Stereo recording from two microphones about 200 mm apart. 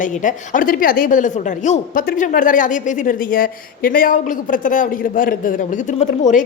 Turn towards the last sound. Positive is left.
turn(degrees=35)  # may be behind; listen again after turning